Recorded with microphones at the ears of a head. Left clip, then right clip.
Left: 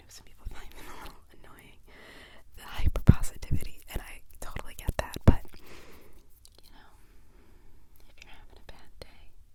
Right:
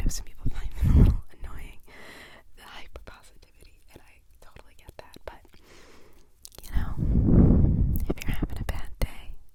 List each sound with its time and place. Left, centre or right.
0.0 s whispering: right
2.8 s whispering: left
6.4 s whispering: right